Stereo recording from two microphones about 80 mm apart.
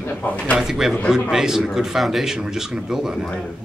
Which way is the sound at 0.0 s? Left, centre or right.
Left.